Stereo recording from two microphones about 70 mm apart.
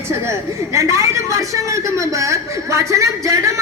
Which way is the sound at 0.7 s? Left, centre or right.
Right.